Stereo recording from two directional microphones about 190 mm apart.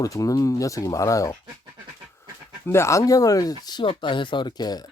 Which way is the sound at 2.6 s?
15° left (ahead or behind).